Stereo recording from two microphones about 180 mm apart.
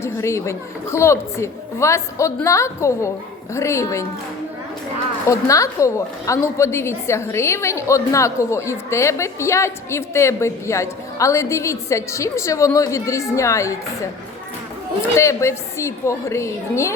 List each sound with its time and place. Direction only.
0.0 s a woman's voice: 15° left (ahead or behind)
5.3 s a woman's voice: 20° left (ahead or behind)
15.1 s a woman's voice: 15° left (ahead or behind)